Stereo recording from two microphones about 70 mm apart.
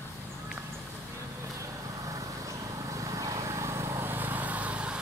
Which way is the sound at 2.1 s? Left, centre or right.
Right.